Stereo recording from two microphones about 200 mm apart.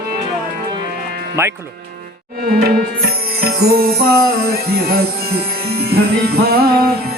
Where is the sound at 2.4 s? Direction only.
50° right (ahead or behind).